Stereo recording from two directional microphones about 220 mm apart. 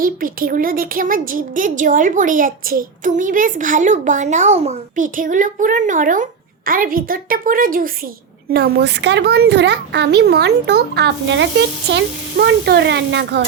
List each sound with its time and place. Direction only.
0.0 s a woman's voice: 40° right (ahead or behind)